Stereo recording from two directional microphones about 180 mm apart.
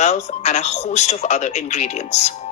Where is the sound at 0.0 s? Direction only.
40° left (ahead or behind).